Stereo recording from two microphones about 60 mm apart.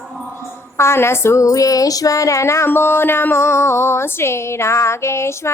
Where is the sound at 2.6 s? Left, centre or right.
Left.